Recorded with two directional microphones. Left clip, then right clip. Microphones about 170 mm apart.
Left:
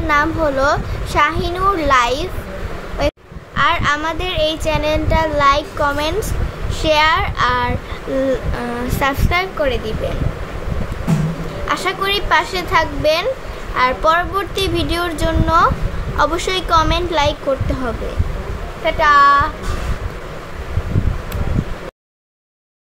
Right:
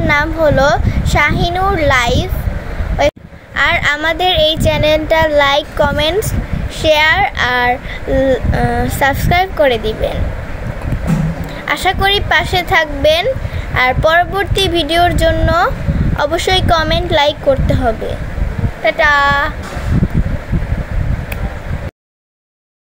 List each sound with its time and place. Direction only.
0.1 s a child's voice: 15° right (ahead or behind)
9.0 s speech: 15° right (ahead or behind)
11.6 s a child's voice: 20° right (ahead or behind)
18.9 s speech: 20° right (ahead or behind)